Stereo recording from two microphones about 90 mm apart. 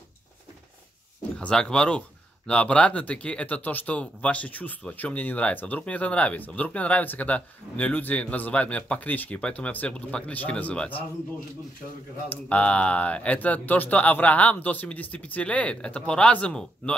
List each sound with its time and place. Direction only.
1.4 s speech: 10° left (ahead or behind)
12.3 s speech: 15° left (ahead or behind)